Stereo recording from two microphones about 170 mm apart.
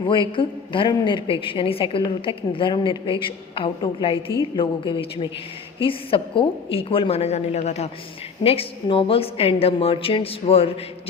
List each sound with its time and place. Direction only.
0.0 s a woman's voice: 30° left (ahead or behind)